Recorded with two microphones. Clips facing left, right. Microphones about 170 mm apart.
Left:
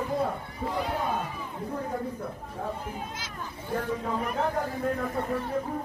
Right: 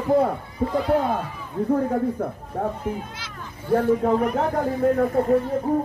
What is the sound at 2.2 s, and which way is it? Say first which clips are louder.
Chatter: right 9 dB; 55° right (ahead or behind).